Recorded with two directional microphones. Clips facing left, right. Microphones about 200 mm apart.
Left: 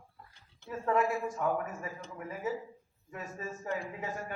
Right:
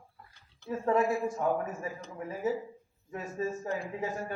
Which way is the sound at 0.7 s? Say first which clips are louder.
Right 3 dB; 30° right (ahead or behind).